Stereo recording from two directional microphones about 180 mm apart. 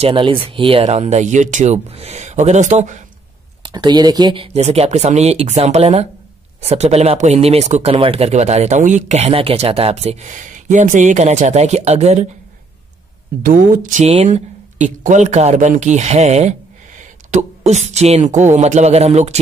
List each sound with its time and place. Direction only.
0.0 s speech: 30° right (ahead or behind)
3.6 s speech: 25° right (ahead or behind)
4.6 s speech: 35° right (ahead or behind)
13.4 s speech: 50° right (ahead or behind)